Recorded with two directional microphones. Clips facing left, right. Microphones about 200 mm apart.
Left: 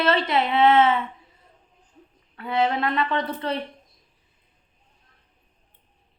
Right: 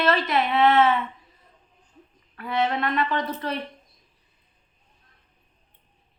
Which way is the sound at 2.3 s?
25° left (ahead or behind).